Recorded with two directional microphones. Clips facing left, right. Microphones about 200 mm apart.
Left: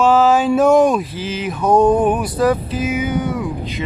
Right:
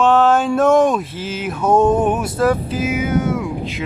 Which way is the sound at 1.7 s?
25° right (ahead or behind).